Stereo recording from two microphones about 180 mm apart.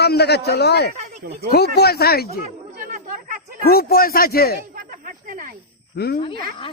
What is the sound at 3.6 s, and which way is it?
Speech, 60° left (ahead or behind).